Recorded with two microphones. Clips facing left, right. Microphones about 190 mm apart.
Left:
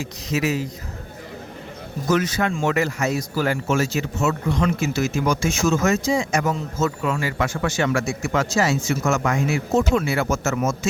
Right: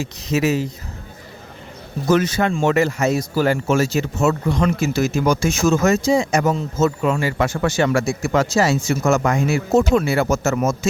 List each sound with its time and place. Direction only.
0.0 s speech: 25° right (ahead or behind)
2.0 s speech: 30° right (ahead or behind)